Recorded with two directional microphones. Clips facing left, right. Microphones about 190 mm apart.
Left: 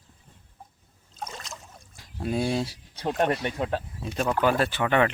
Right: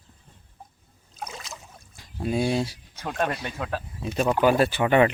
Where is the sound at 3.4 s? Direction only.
25° left (ahead or behind).